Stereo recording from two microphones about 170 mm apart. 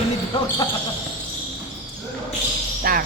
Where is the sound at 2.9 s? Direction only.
60° right (ahead or behind).